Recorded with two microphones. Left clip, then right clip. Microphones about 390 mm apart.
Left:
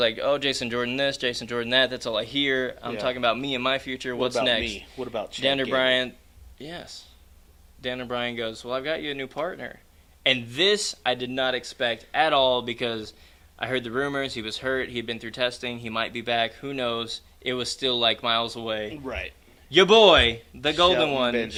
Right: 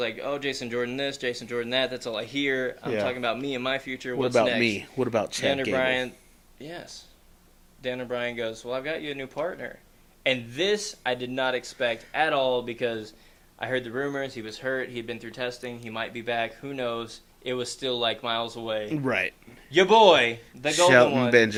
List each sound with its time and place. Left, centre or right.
0.0 s speech: left
4.8 s speech: right
5.4 s speech: left
19.0 s speech: right
19.7 s speech: left